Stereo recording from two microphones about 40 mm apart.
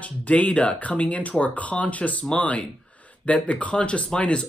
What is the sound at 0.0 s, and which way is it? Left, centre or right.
Speech, left.